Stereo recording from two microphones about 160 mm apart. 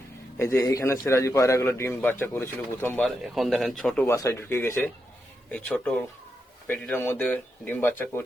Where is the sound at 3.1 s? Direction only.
Centre (ahead or behind).